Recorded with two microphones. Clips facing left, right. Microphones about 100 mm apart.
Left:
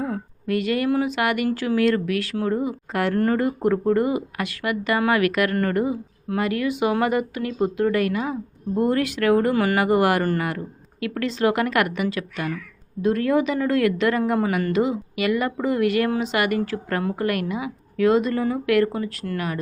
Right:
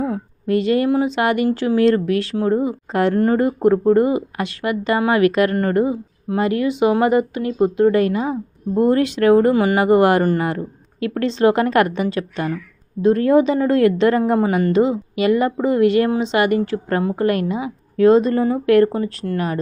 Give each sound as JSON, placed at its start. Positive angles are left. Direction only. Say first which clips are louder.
{"t": 0.1, "sound": "speech", "louder": "right 5 dB", "side_deg": -25}